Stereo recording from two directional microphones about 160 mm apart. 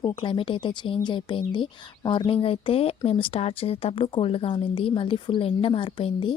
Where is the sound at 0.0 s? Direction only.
25° left (ahead or behind).